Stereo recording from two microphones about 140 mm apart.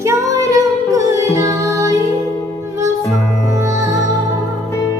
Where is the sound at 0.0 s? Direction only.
20° right (ahead or behind).